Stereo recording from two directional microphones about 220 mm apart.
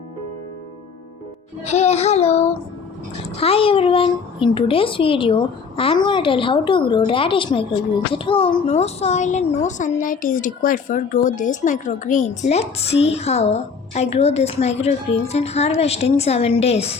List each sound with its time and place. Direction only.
1.6 s child singing: 30° left (ahead or behind)
3.4 s a sound: 25° left (ahead or behind)
4.5 s speech: 25° left (ahead or behind)